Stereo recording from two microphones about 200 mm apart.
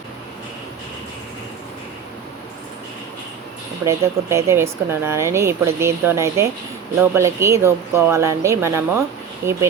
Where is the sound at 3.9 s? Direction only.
15° right (ahead or behind).